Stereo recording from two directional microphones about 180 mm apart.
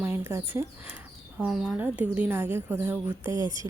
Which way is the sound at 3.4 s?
25° left (ahead or behind).